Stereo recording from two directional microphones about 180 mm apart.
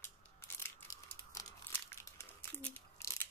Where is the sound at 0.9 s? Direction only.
20° left (ahead or behind).